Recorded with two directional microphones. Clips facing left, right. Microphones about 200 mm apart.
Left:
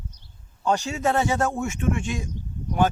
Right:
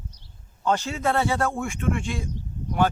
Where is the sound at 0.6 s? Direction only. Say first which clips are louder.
Left 1 dB; 15° left (ahead or behind).